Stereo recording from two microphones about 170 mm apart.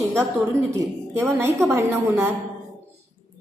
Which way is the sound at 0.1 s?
15° right (ahead or behind).